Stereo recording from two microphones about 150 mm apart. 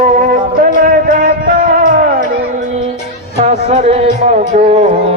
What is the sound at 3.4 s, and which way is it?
Music, 45° right (ahead or behind).